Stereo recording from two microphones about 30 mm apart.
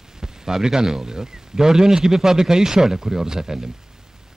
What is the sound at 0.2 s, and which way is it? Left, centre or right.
Speech, centre.